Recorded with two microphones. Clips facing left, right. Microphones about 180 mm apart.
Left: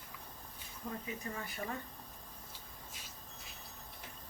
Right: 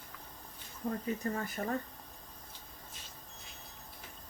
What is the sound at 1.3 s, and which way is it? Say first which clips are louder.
Speech: right 6 dB; 45° right (ahead or behind).